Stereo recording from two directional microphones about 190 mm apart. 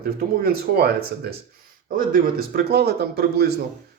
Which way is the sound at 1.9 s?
50° right (ahead or behind).